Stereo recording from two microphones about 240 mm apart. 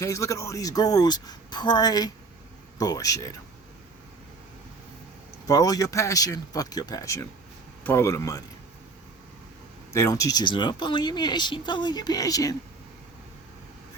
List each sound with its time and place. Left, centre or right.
0.0 s speech: centre
5.5 s speech: centre
9.9 s speech: centre